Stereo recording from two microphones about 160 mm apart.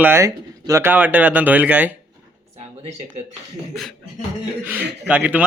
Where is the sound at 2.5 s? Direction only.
45° right (ahead or behind).